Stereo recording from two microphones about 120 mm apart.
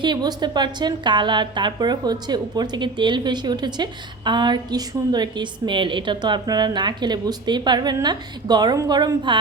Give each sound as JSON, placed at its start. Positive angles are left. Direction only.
{"t": 0.0, "sound": "a woman's voice", "side_deg": -35}